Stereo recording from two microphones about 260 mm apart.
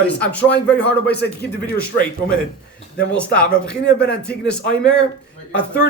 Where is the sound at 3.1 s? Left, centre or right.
Centre.